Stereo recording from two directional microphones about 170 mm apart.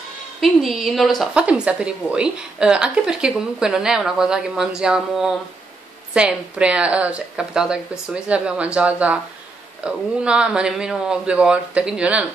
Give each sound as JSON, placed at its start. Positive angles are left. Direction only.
{"t": 0.4, "sound": "a woman's voice", "side_deg": 0}